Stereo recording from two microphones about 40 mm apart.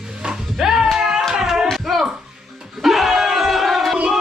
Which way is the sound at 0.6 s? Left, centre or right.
Centre.